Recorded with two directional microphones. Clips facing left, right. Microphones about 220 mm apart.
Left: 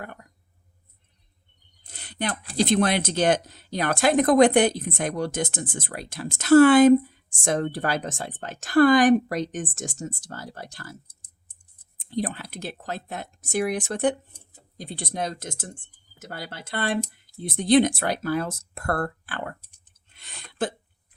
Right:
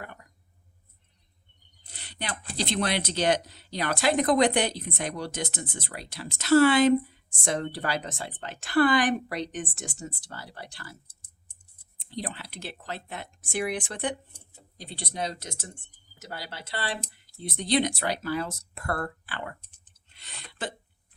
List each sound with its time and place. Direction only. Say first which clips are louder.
1.8 s speech: left 8 dB; 50° left (ahead or behind)
11.9 s speech: left 7 dB; 50° left (ahead or behind)
20.1 s a sound: left 10 dB; 50° left (ahead or behind)